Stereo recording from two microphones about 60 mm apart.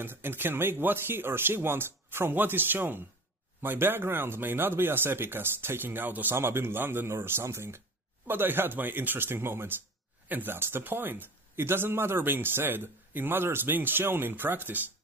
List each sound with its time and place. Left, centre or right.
0.0 s speech: right
8.3 s speech: right